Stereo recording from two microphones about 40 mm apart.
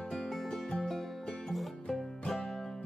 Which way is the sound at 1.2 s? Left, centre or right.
Centre.